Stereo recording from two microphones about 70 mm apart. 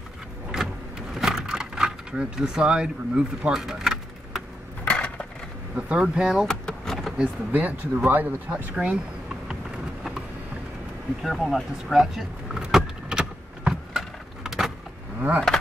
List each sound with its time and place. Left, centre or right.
0.5 s vehicle: centre
4.8 s a sound: centre
5.8 s speech: centre
6.4 s vehicle: centre
7.5 s speech: right
8.7 s speech: centre
11.2 s vehicle: centre
15.1 s a sound: right